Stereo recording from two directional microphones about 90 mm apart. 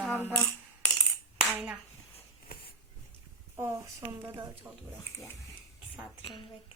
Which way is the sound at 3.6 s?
30° right (ahead or behind).